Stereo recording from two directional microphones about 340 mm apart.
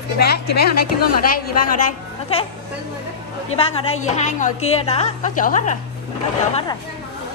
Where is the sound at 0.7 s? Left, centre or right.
Left.